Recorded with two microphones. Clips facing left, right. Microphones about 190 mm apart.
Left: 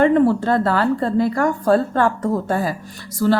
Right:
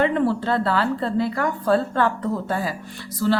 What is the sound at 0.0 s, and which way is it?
Speech, 45° left (ahead or behind).